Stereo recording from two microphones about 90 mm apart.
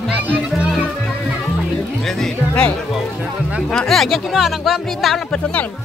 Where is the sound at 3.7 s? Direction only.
5° left (ahead or behind).